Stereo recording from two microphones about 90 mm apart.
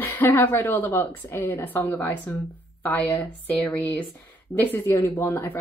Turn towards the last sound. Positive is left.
turn(degrees=20)  # may be behind; listen again after turning